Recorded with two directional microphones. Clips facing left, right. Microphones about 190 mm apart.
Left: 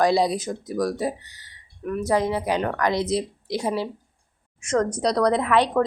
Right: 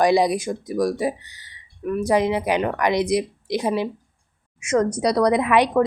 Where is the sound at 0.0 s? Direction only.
15° right (ahead or behind).